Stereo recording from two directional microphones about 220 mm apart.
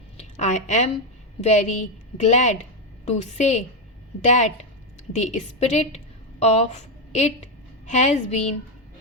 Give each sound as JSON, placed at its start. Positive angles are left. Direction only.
{"t": 0.2, "sound": "a woman's voice", "side_deg": 30}